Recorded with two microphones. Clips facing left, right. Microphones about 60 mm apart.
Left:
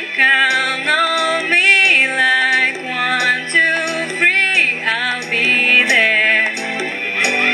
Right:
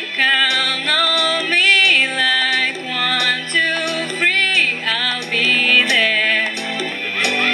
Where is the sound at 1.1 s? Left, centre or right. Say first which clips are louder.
Left 2 dB; centre.